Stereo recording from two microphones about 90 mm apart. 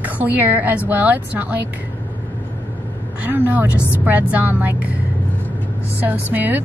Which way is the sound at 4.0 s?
20° right (ahead or behind).